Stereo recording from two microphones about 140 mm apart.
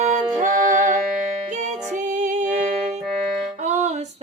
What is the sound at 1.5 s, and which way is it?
Music, 60° right (ahead or behind).